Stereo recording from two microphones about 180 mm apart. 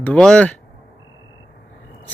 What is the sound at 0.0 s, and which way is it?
Speech, 5° left (ahead or behind).